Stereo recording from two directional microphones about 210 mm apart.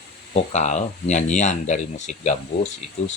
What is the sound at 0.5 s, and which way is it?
Speech, 35° left (ahead or behind).